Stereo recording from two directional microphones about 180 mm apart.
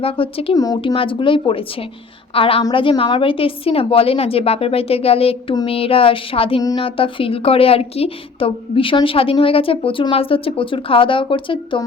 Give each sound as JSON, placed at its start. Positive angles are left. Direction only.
{"t": 0.0, "sound": "a woman's voice", "side_deg": 30}